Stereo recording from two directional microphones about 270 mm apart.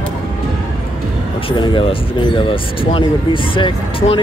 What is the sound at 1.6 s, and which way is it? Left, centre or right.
Speech, centre.